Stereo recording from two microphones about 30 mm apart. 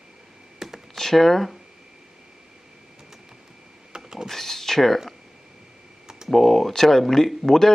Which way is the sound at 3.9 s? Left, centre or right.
Right.